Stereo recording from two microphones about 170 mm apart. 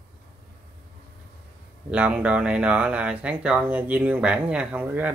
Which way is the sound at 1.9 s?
5° right (ahead or behind).